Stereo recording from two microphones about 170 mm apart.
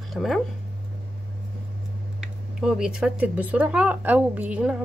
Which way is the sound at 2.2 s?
5° right (ahead or behind).